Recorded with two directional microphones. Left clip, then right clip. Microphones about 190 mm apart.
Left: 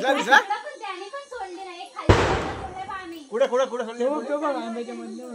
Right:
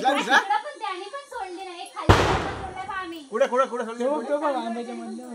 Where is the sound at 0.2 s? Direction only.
50° left (ahead or behind).